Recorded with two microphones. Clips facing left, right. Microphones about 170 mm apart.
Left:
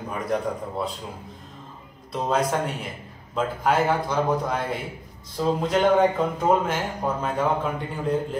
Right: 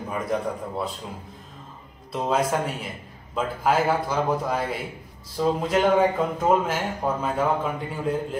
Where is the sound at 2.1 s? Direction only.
5° right (ahead or behind).